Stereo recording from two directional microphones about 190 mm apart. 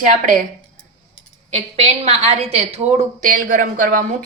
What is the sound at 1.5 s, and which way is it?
Speech, 35° right (ahead or behind).